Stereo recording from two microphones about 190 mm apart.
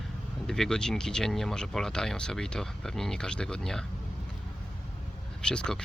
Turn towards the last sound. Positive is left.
turn(degrees=5)  # may be behind; listen again after turning